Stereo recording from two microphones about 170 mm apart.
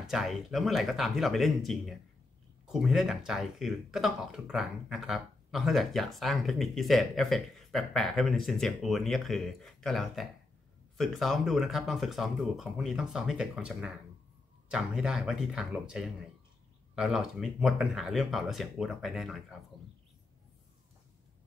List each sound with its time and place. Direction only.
0.0 s speech: centre (ahead or behind)